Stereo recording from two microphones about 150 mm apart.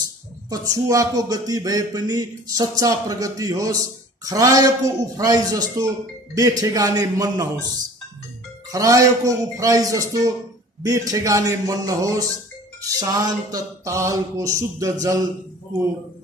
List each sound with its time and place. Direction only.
0.5 s speech: 20° right (ahead or behind)
8.7 s speech: 20° right (ahead or behind)